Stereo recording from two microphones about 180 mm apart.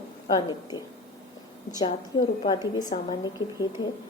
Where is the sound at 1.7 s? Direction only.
25° left (ahead or behind).